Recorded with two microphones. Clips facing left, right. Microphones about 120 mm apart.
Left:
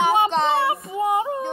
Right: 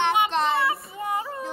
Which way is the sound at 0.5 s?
30° left (ahead or behind).